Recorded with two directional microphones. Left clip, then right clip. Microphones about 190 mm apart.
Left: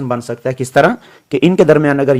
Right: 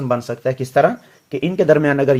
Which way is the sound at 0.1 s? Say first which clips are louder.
Even; 25° left (ahead or behind).